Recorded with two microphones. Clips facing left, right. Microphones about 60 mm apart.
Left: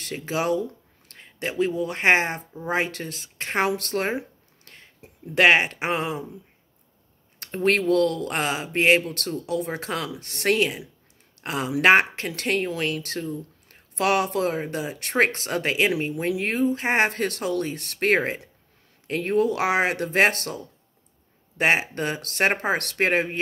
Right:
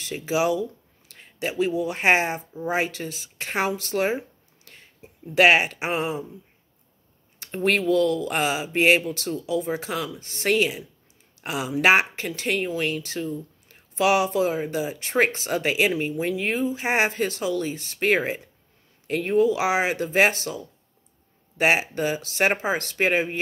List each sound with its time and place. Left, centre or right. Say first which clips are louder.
0.0 s a sound: right 3 dB; left
1.8 s speech: even; left
5.3 s speech: even; left
7.3 s speech: left 1 dB; left